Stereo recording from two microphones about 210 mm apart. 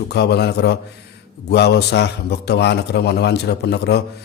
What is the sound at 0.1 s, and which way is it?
Speech, 50° left (ahead or behind).